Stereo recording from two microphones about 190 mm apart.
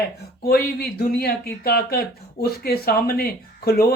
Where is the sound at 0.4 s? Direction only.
55° left (ahead or behind).